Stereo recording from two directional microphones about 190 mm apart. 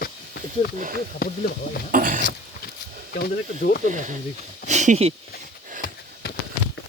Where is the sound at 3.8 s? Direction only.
40° right (ahead or behind).